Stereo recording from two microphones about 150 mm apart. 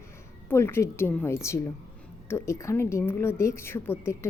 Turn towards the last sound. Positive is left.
turn(degrees=15)  # may be behind; listen again after turning